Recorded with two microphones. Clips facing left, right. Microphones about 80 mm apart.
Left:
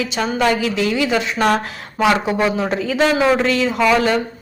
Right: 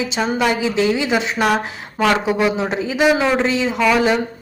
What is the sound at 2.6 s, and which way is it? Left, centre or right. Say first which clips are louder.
Speech: even; centre.